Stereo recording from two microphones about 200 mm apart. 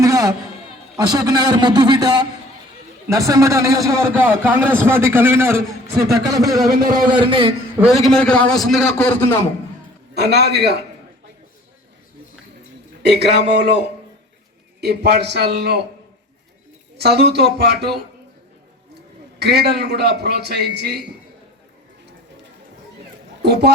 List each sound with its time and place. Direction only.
0.0 s music: 15° right (ahead or behind)
0.9 s a man's voice: 20° right (ahead or behind)
8.0 s a man's voice: 5° left (ahead or behind)
10.2 s a man's voice: 55° right (ahead or behind)
13.0 s a man's voice: 55° right (ahead or behind)
14.8 s a man's voice: 55° right (ahead or behind)
17.0 s a man's voice: 55° right (ahead or behind)
19.4 s a man's voice: 55° right (ahead or behind)
23.4 s a man's voice: 55° right (ahead or behind)